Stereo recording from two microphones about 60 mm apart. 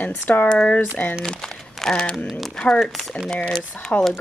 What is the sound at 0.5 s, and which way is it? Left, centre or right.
Speech, centre.